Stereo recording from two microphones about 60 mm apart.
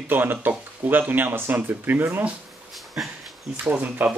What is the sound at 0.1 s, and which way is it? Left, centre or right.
Speech, right.